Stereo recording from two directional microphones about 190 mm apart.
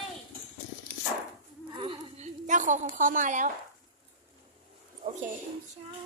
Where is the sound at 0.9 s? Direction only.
50° right (ahead or behind).